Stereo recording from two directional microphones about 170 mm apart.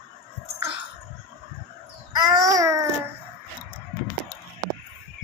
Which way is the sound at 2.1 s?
20° right (ahead or behind).